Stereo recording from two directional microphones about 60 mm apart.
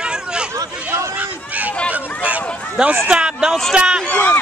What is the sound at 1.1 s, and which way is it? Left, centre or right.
Speech, right.